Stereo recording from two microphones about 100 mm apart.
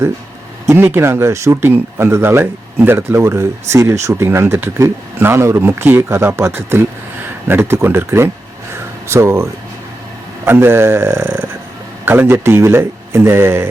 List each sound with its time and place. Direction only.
0.7 s speech: 25° right (ahead or behind)
8.7 s a sound: 25° right (ahead or behind)
10.4 s speech: 25° right (ahead or behind)